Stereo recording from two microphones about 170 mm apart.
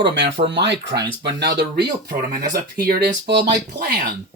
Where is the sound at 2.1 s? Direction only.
55° right (ahead or behind).